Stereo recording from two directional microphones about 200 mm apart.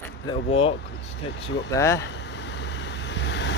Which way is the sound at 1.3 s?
60° left (ahead or behind).